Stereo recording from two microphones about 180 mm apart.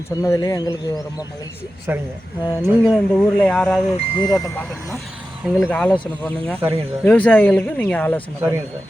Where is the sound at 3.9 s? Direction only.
25° left (ahead or behind).